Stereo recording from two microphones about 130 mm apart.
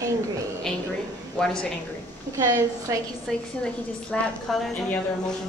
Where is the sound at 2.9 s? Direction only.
25° right (ahead or behind).